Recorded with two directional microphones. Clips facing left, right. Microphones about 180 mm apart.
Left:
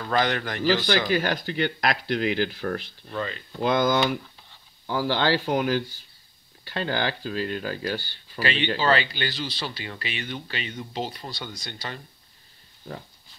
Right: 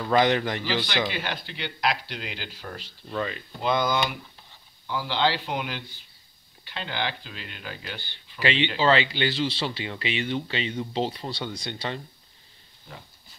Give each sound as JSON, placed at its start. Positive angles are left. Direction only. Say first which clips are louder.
{"t": 0.1, "sound": "speech", "louder": "right 3 dB", "side_deg": -20}
{"t": 0.7, "sound": "speech", "louder": "left 10 dB", "side_deg": 45}
{"t": 3.2, "sound": "speech", "louder": "right 1 dB", "side_deg": -15}
{"t": 4.8, "sound": "speech", "louder": "left 2 dB", "side_deg": 45}
{"t": 8.0, "sound": "speech", "louder": "right 1 dB", "side_deg": -20}